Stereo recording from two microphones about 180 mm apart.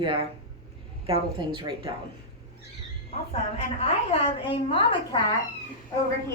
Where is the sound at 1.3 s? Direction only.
25° right (ahead or behind).